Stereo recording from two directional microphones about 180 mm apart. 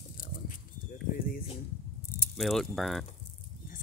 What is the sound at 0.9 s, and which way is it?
Bird, 55° left (ahead or behind).